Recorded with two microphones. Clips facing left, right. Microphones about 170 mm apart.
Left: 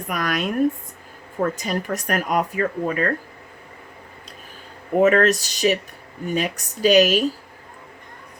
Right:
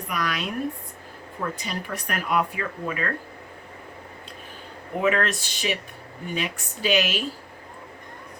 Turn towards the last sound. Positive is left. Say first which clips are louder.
# left 8 dB
turn(degrees=40)  # may be behind; listen again after turning